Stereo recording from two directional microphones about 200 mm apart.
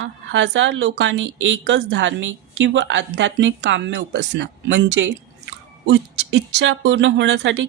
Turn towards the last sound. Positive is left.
turn(degrees=-65)  # may be behind; listen again after turning